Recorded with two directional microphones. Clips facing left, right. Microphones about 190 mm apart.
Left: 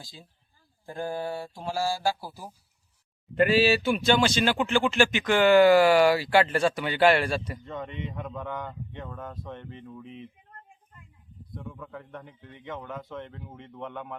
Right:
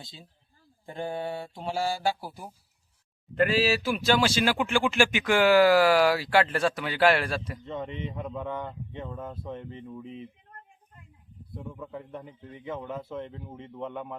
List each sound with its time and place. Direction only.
1.7 s speech: 20° right (ahead or behind)
2.0 s speech: 5° left (ahead or behind)
7.6 s speech: 25° right (ahead or behind)
8.2 s speech: 5° right (ahead or behind)
11.7 s speech: 25° right (ahead or behind)
12.2 s speech: 5° right (ahead or behind)